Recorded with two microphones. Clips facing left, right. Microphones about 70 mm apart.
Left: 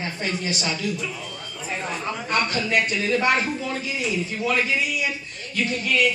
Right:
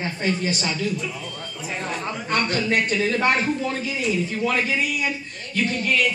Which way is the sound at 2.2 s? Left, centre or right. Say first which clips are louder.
Right 2 dB; right.